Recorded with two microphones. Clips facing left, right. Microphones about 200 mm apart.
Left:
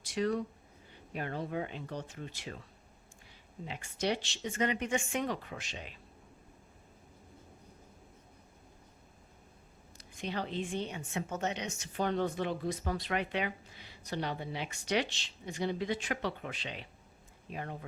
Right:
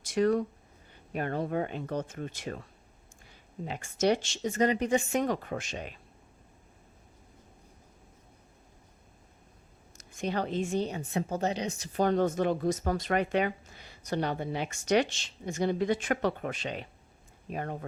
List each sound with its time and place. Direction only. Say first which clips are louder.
0.0 s a woman's voice: right 6 dB; 50° right (ahead or behind)
3.7 s a woman's voice: right 7 dB; 45° right (ahead or behind)
10.2 s a woman's voice: right 6 dB; 45° right (ahead or behind)